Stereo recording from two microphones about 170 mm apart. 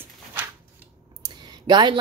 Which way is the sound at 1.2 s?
25° right (ahead or behind).